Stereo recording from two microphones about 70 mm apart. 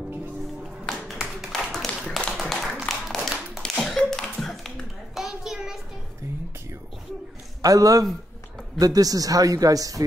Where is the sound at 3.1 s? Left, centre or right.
Centre.